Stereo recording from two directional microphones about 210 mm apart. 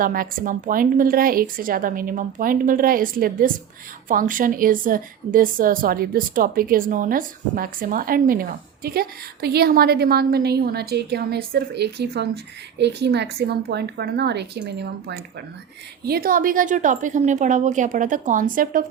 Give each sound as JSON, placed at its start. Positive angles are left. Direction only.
{"t": 0.0, "sound": "a woman's voice", "side_deg": -40}